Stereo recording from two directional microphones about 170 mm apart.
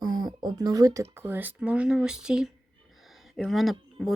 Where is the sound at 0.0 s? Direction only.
25° right (ahead or behind).